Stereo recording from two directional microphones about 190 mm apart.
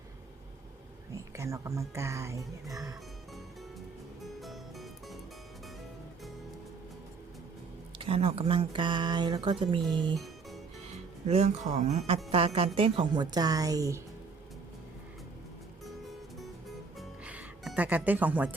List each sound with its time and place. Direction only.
1.1 s speech: 15° right (ahead or behind)
4.2 s music: centre (ahead or behind)
7.9 s speech: 30° right (ahead or behind)
11.3 s speech: 35° right (ahead or behind); by 14.0 s 15° right (ahead or behind)
16.4 s music: centre (ahead or behind)